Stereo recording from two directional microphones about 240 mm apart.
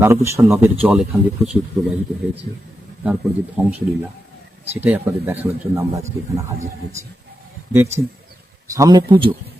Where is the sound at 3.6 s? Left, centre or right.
Centre.